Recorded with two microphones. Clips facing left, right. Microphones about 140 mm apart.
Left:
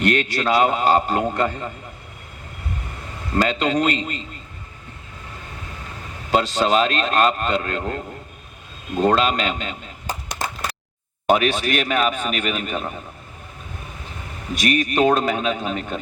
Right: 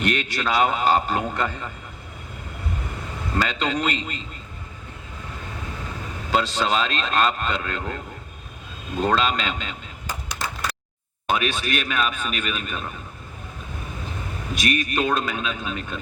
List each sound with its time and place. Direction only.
0.0 s a man's voice: 50° left (ahead or behind)
3.3 s a man's voice: 45° left (ahead or behind)
6.3 s a man's voice: 50° left (ahead or behind)
9.0 s a sound: 50° left (ahead or behind)
11.3 s a man's voice: 50° left (ahead or behind)
14.9 s a man's voice: 40° left (ahead or behind)